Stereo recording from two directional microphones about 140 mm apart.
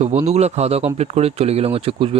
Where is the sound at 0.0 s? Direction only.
50° right (ahead or behind).